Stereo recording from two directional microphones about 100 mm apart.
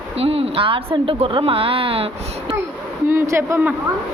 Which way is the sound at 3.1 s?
25° right (ahead or behind).